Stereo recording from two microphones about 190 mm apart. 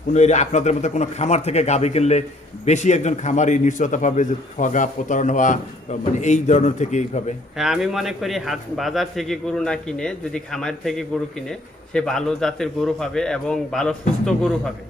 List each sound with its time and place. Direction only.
0.1 s a man's voice: 40° left (ahead or behind)
7.5 s a man's voice: centre (ahead or behind)